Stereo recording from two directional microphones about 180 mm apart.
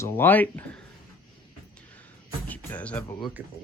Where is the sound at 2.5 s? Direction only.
10° left (ahead or behind).